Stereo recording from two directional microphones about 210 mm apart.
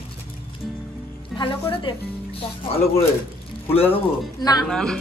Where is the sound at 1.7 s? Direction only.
25° left (ahead or behind).